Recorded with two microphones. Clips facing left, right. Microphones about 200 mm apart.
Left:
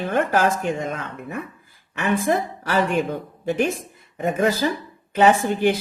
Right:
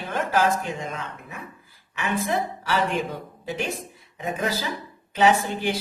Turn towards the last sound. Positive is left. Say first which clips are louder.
# left 4 dB
turn(degrees=55)  # may be behind; listen again after turning